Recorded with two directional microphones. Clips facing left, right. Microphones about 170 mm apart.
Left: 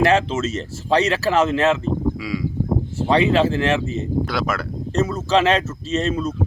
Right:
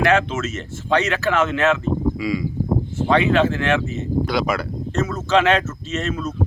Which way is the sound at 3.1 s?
35° left (ahead or behind).